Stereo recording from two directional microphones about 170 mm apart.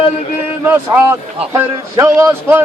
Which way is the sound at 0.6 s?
10° right (ahead or behind).